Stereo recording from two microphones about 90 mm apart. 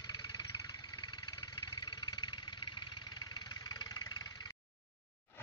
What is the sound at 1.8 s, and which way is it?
Vehicle, 55° left (ahead or behind).